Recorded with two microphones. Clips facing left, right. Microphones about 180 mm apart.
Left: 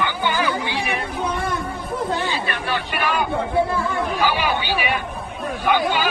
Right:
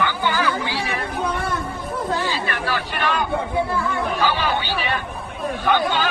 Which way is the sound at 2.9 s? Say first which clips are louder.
Left 1 dB; 10° left (ahead or behind).